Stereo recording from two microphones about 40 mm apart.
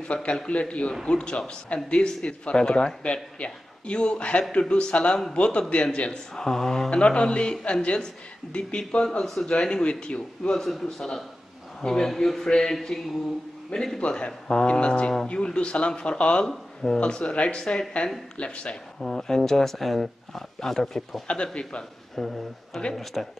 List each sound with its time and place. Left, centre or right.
0.1 s a man's voice: left
6.3 s speech: centre
6.9 s speech: left
9.2 s speech: centre
10.6 s speech: centre
13.7 s speech: left
16.4 s speech: centre
17.0 s speech: left
18.9 s speech: centre
21.3 s speech: left
22.1 s speech: centre
22.7 s speech: left
23.2 s speech: centre